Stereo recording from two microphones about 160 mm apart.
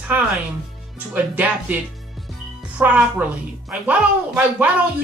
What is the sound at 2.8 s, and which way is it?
A man's voice, 10° right (ahead or behind).